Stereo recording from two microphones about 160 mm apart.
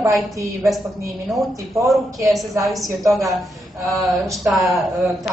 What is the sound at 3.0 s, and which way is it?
Speech, 20° right (ahead or behind).